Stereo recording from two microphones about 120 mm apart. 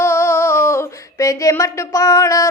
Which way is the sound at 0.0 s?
20° left (ahead or behind).